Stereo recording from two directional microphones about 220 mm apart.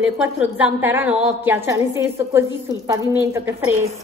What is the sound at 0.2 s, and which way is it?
A woman's voice, 10° right (ahead or behind).